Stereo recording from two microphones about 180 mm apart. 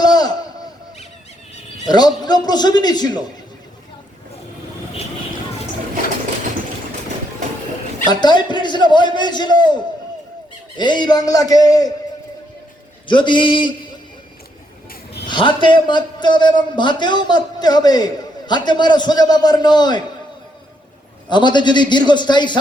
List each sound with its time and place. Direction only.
0.0 s a sound: 20° left (ahead or behind)
1.9 s a man's voice: 20° left (ahead or behind)
8.0 s a man's voice: 25° left (ahead or behind)
10.8 s a man's voice: 25° left (ahead or behind)
13.1 s a man's voice: 25° left (ahead or behind)
15.3 s a man's voice: 25° left (ahead or behind)
21.2 s a man's voice: 25° left (ahead or behind)